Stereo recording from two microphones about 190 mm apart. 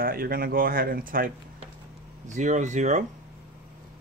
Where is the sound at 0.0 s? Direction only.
50° right (ahead or behind).